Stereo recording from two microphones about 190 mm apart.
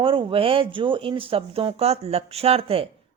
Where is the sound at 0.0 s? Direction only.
25° right (ahead or behind).